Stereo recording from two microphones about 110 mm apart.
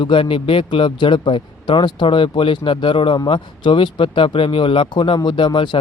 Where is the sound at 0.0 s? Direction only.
50° left (ahead or behind).